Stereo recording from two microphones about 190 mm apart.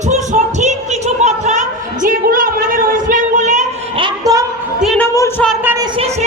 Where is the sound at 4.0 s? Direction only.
20° right (ahead or behind).